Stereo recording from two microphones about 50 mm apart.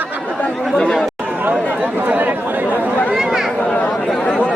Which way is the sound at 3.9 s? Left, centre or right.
Centre.